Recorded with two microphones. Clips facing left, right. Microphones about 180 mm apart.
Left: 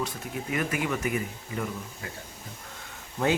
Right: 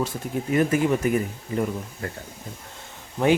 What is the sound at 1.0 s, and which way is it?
Speech, 45° right (ahead or behind).